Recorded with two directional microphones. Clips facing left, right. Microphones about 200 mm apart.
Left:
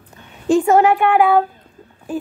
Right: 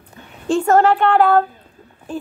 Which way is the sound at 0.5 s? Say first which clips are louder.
Left 1 dB; 10° left (ahead or behind).